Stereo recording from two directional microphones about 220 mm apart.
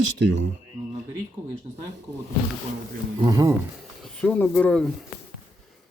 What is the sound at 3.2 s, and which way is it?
Speech, 15° right (ahead or behind).